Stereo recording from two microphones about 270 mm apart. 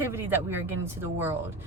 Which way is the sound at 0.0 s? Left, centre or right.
Centre.